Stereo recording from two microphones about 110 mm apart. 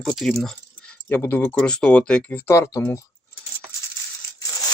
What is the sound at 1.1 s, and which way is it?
Speech, 20° left (ahead or behind).